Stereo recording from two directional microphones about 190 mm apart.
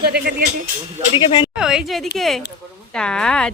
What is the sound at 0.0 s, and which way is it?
Speech, 55° right (ahead or behind).